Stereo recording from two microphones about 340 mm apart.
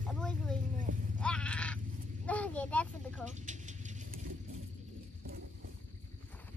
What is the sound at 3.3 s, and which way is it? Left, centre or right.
Vehicle, right.